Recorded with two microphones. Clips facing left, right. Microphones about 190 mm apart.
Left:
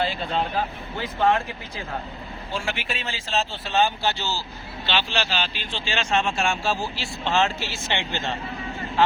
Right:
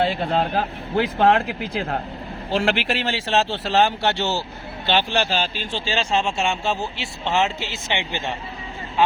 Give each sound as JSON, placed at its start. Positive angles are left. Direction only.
{"t": 0.0, "sound": "speech", "side_deg": -60}
{"t": 4.9, "sound": "a man's voice", "side_deg": -50}